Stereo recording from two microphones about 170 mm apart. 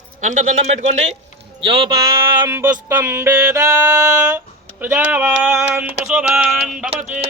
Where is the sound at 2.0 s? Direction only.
25° right (ahead or behind).